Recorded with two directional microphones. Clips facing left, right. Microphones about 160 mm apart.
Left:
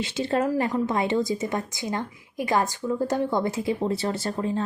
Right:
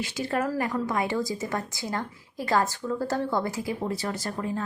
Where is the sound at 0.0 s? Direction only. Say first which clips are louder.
Left 3 dB; 25° left (ahead or behind).